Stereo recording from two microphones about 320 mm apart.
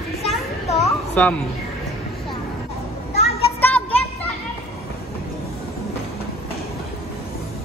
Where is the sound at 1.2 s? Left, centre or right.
Centre.